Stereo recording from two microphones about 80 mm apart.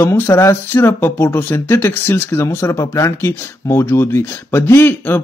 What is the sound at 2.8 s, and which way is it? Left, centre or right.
Speech, left.